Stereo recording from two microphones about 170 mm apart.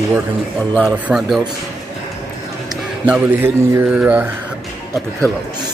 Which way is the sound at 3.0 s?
10° right (ahead or behind).